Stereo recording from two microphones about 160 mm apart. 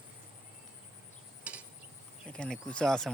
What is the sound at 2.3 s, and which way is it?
Speech, 5° left (ahead or behind).